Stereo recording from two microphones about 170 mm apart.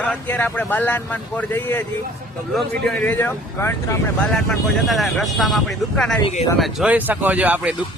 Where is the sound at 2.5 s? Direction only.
Centre (ahead or behind).